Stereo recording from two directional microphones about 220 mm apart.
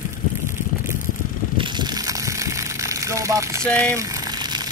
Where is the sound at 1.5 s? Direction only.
20° right (ahead or behind).